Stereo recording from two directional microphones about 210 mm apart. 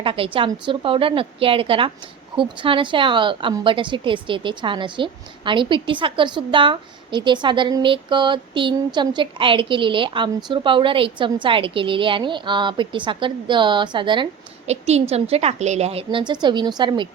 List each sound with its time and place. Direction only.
0.0 s a woman's voice: 25° right (ahead or behind)